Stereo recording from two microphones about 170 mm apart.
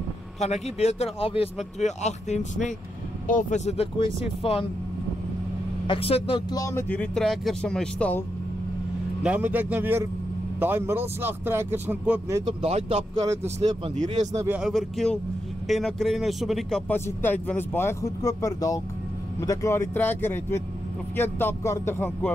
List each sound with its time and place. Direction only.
0.4 s speech: 40° left (ahead or behind)
5.9 s speech: 35° left (ahead or behind)
6.5 s speech: 15° left (ahead or behind)
9.2 s speech: 10° right (ahead or behind)
12.6 s speech: 40° right (ahead or behind)
13.2 s speech: 20° right (ahead or behind)
13.6 s speech: 40° right (ahead or behind)
14.4 s speech: 5° right (ahead or behind)
16.9 s speech: 10° left (ahead or behind)